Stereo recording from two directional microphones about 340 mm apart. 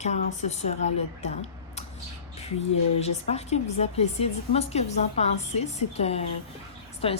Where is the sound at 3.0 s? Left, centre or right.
Centre.